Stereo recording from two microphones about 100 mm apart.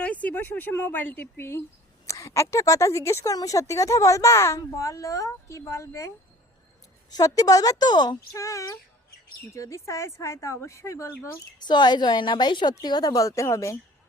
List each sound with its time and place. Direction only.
0.0 s speech: 15° left (ahead or behind); by 6.1 s 30° left (ahead or behind)
7.1 s speech: 40° left (ahead or behind)
8.4 s speech: 30° left (ahead or behind)
11.6 s a woman's voice: 45° left (ahead or behind); by 13.7 s 30° left (ahead or behind)